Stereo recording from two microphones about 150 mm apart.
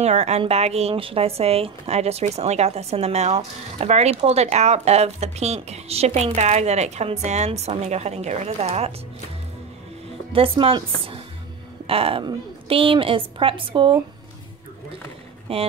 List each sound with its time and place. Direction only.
0.0 s speech: 45° right (ahead or behind)
10.3 s a woman's voice: 35° right (ahead or behind)
15.5 s a woman's voice: 40° right (ahead or behind)